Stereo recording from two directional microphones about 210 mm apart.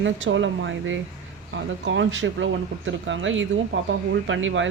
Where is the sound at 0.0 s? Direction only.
65° right (ahead or behind).